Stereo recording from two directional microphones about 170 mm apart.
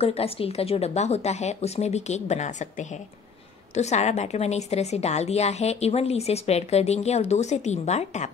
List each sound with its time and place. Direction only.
0.0 s a woman's voice: 35° left (ahead or behind)